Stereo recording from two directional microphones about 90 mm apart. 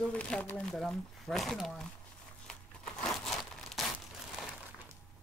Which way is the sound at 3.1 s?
Centre (ahead or behind).